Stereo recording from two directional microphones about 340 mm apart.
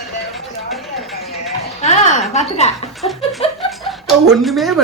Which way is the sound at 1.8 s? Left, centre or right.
Centre.